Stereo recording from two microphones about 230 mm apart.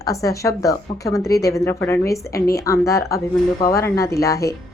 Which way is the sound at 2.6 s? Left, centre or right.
Centre.